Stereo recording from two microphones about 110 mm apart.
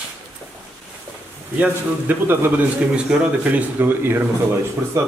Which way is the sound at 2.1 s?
15° right (ahead or behind).